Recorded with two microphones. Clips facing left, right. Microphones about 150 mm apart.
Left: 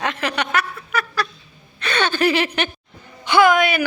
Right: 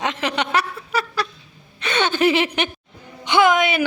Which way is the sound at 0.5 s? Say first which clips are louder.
Right 1 dB; 30° right (ahead or behind).